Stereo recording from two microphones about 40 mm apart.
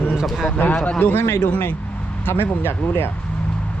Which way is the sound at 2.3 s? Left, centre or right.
Left.